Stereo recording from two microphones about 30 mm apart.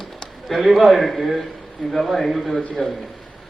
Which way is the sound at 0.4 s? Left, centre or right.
Centre.